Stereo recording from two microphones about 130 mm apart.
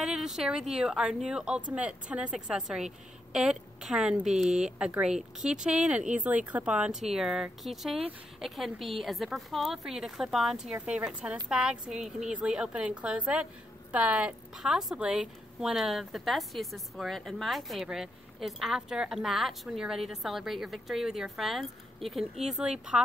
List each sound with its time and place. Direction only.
0.0 s a woman's voice: 5° right (ahead or behind)